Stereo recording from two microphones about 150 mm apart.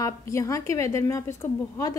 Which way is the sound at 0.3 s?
20° left (ahead or behind).